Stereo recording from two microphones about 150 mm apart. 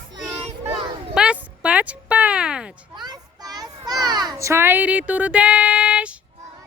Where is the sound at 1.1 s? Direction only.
5° right (ahead or behind).